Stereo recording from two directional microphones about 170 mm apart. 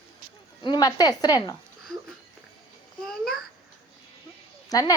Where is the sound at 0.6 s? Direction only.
25° left (ahead or behind).